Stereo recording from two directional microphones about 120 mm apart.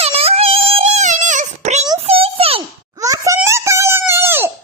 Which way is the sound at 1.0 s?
90° right.